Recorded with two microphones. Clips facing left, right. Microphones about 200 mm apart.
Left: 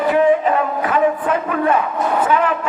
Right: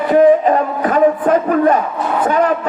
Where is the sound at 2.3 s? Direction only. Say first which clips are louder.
Right 3 dB; 40° right (ahead or behind).